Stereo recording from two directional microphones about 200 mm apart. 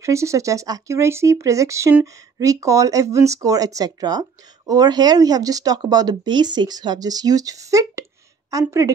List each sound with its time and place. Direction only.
0.0 s speech: 15° right (ahead or behind)